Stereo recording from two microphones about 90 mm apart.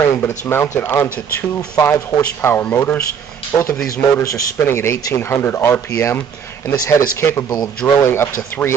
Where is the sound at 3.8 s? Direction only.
35° left (ahead or behind).